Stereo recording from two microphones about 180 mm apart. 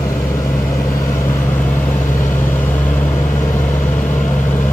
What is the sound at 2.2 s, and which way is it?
Vehicle, 15° left (ahead or behind).